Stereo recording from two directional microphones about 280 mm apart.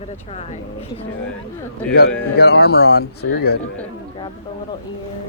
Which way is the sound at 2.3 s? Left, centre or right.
Left.